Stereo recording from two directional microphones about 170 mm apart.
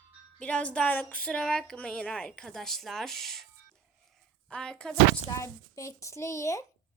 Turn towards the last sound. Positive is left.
turn(degrees=20)  # may be behind; listen again after turning